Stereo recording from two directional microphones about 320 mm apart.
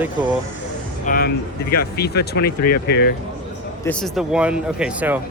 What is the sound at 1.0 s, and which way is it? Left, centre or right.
Speech, left.